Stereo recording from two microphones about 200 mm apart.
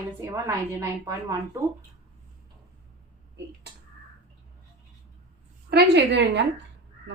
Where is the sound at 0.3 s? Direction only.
15° right (ahead or behind).